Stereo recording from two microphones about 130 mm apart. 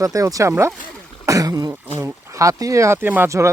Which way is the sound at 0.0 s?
25° right (ahead or behind).